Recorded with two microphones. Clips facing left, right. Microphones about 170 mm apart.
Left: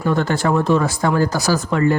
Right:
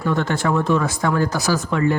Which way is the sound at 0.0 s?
35° left (ahead or behind).